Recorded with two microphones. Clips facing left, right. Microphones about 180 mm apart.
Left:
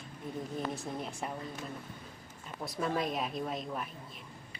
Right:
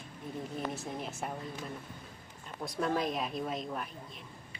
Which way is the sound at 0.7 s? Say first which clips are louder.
Even; centre (ahead or behind).